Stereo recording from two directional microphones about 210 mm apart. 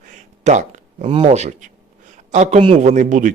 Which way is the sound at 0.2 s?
35° right (ahead or behind).